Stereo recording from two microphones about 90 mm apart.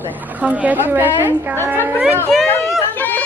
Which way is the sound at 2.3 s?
Centre (ahead or behind).